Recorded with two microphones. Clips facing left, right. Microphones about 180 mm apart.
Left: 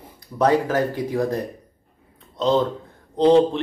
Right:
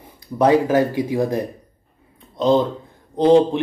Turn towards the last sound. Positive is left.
turn(degrees=-15)  # may be behind; listen again after turning